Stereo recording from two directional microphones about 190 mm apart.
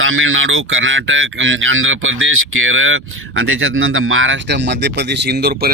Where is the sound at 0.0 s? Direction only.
90° right.